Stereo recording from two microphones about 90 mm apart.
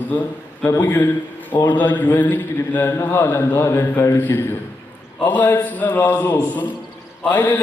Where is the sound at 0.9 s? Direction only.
20° left (ahead or behind).